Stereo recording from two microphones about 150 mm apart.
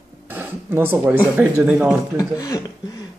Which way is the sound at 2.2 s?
25° left (ahead or behind).